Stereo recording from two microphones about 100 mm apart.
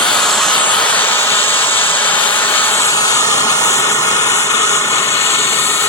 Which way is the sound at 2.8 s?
35° left (ahead or behind).